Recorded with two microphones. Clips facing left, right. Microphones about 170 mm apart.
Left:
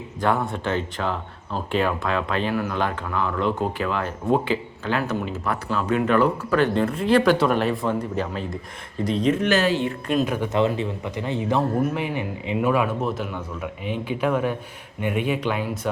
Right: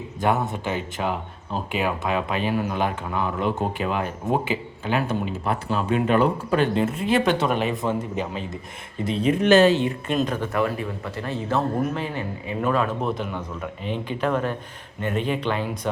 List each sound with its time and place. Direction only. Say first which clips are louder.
0.2 s speech: even; 20° right (ahead or behind)
9.4 s speech: right 5 dB; 25° right (ahead or behind)
10.1 s speech: left 3 dB; centre (ahead or behind)
10.5 s speech: left 3 dB; 20° left (ahead or behind); by 15.9 s 5° left (ahead or behind)